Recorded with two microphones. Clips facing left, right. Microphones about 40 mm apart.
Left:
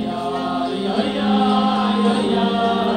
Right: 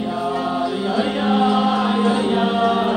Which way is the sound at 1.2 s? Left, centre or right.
Centre.